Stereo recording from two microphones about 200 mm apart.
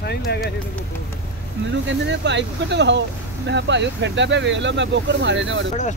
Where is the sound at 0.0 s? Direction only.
55° left (ahead or behind).